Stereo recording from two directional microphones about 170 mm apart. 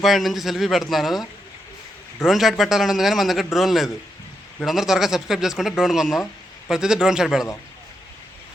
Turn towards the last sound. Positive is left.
turn(degrees=0)  # may be behind; listen again after turning